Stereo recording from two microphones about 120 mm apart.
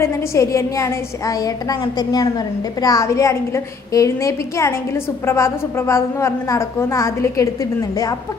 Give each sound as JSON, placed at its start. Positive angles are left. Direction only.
{"t": 0.0, "sound": "a woman's voice", "side_deg": 20}